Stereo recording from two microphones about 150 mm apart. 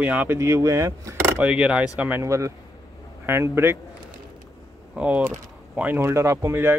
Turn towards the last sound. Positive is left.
turn(degrees=-15)  # may be behind; listen again after turning